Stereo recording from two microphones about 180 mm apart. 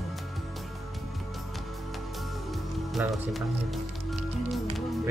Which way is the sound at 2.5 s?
Centre (ahead or behind).